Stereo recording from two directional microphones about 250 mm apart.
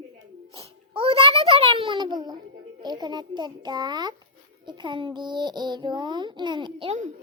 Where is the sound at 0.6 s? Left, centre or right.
Right.